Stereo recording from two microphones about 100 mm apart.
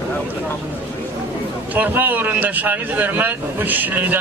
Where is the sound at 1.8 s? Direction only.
20° right (ahead or behind).